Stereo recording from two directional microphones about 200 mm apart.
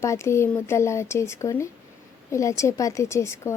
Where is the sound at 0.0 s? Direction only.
15° left (ahead or behind).